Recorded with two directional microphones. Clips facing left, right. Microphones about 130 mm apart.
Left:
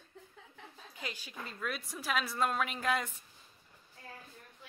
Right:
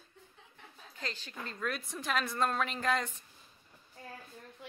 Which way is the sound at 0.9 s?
10° left (ahead or behind).